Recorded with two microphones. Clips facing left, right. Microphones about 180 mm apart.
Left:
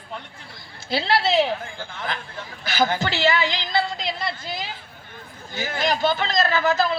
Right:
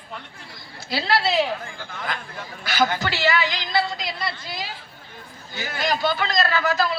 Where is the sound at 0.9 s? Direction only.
25° left (ahead or behind).